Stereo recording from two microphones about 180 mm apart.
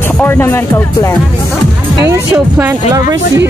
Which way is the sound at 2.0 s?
15° right (ahead or behind).